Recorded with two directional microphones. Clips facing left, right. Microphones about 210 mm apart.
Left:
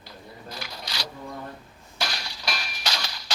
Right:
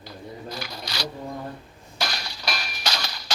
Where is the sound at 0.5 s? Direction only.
40° right (ahead or behind).